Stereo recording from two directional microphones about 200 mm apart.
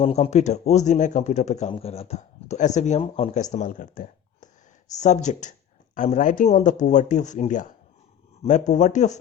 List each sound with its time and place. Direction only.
0.0 s speech: 30° left (ahead or behind)